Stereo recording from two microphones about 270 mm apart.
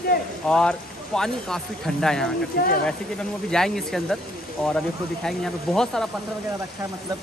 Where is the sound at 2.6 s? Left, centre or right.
Left.